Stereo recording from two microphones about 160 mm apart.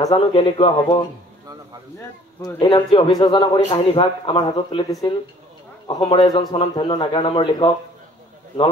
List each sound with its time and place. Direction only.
0.1 s a man's voice: 35° left (ahead or behind)
2.6 s a man's voice: 25° left (ahead or behind)